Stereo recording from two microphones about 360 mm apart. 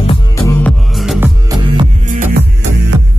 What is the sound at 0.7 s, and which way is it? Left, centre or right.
Music, centre.